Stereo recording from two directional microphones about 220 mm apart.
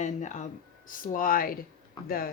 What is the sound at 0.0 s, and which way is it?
Speech, 35° left (ahead or behind).